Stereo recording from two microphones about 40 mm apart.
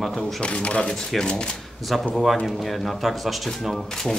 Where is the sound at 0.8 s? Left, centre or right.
Centre.